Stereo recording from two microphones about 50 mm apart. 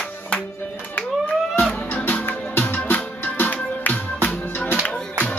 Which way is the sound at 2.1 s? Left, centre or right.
Left.